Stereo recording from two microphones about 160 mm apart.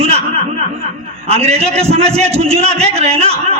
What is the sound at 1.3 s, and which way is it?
A man's voice, 40° right (ahead or behind).